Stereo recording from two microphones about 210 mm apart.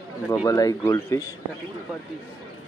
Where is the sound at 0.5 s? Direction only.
15° left (ahead or behind).